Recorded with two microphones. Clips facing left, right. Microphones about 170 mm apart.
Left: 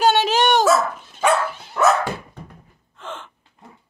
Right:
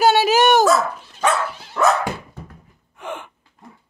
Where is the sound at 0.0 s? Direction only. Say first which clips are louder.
Right 2 dB; 10° right (ahead or behind).